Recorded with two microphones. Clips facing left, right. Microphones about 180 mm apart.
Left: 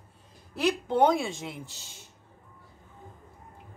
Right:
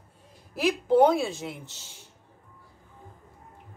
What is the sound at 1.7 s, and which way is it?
Speech, 15° left (ahead or behind).